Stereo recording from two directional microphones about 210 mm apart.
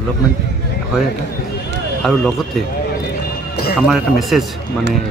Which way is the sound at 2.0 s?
Centre (ahead or behind).